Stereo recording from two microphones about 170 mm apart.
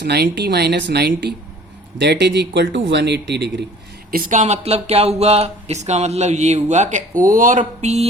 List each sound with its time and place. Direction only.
0.0 s a man's voice: 75° right (ahead or behind)
4.1 s speech: 55° right (ahead or behind)